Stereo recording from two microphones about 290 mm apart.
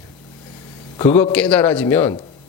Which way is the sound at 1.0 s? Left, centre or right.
Centre.